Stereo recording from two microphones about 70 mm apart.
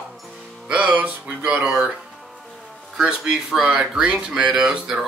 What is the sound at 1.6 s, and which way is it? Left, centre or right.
Speech, centre.